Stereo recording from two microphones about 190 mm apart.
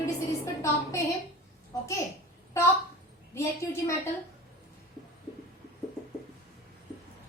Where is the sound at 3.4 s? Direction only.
15° left (ahead or behind).